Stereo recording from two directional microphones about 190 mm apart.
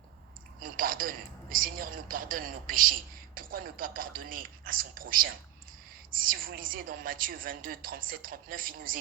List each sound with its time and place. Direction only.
0.6 s a woman's voice: 45° right (ahead or behind)